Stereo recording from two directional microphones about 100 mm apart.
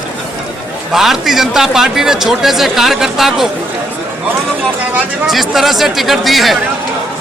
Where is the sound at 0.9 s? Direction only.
5° right (ahead or behind).